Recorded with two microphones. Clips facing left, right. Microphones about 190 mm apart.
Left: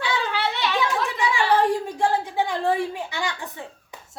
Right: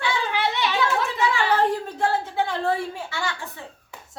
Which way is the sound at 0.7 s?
15° left (ahead or behind).